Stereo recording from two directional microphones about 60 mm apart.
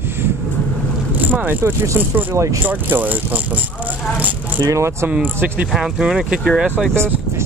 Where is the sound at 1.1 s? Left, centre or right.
Right.